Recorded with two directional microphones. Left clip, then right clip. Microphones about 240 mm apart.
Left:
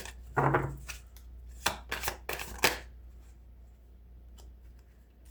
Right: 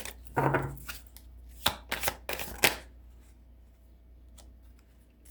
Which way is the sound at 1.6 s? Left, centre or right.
Centre.